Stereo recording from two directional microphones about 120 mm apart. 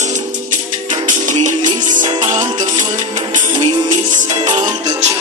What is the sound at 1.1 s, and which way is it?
Music, 90° right.